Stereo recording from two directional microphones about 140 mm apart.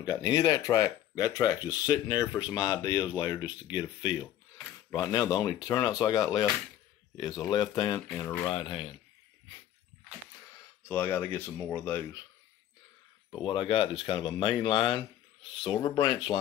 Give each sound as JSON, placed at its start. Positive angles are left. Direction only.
{"t": 0.0, "sound": "speech", "side_deg": 30}
{"t": 8.1, "sound": "speech", "side_deg": 15}
{"t": 8.5, "sound": "speech", "side_deg": 40}
{"t": 10.9, "sound": "speech", "side_deg": 15}
{"t": 13.4, "sound": "speech", "side_deg": 40}